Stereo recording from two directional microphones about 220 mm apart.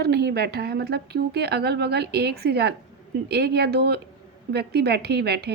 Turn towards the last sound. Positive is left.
turn(degrees=-50)  # may be behind; listen again after turning